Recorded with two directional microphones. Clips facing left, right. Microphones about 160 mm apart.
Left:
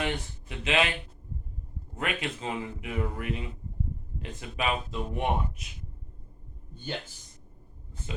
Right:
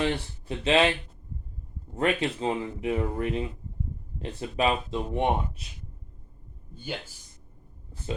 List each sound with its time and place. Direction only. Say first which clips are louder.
0.0 s speech: right 4 dB; 30° right (ahead or behind)
2.0 s speech: right 7 dB; 35° right (ahead or behind)
6.7 s speech: even; 10° right (ahead or behind)